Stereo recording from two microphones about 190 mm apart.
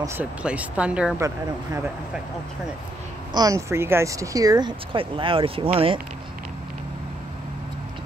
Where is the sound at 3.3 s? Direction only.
20° right (ahead or behind).